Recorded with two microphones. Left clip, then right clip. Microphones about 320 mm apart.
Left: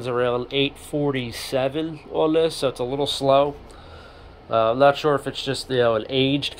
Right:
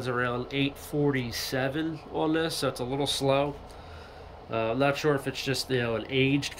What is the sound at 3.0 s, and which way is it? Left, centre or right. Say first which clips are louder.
Speech: left 4 dB; centre.